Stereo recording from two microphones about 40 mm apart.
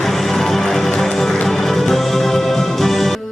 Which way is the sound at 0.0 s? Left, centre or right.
Centre.